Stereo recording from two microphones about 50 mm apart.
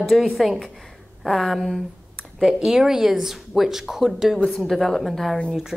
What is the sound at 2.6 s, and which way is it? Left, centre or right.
Speech, centre.